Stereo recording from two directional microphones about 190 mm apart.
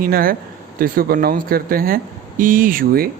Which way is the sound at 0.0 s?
50° right (ahead or behind).